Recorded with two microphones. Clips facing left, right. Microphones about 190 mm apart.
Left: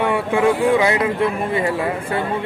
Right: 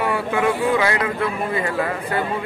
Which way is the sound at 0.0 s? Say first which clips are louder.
Left 3 dB; 25° left (ahead or behind).